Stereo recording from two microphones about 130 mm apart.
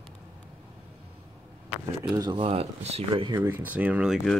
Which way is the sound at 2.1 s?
35° right (ahead or behind).